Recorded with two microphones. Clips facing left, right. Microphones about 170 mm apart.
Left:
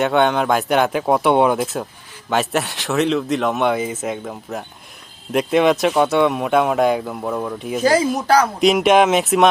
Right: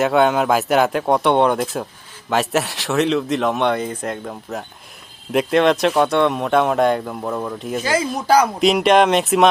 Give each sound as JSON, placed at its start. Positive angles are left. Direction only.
{"t": 0.0, "sound": "speech", "side_deg": 0}
{"t": 7.8, "sound": "speech", "side_deg": 40}
{"t": 8.3, "sound": "speech", "side_deg": -5}